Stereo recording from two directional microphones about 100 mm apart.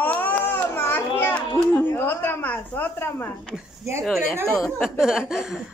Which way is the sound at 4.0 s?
5° left (ahead or behind).